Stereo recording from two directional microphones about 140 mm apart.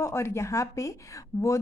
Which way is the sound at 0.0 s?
20° left (ahead or behind).